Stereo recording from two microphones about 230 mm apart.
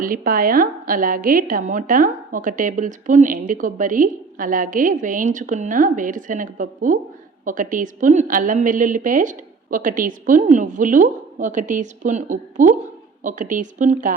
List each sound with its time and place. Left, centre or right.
0.0 s a woman's voice: right